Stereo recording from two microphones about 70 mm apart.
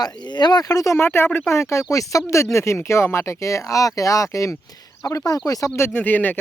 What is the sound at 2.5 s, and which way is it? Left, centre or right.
Speech, left.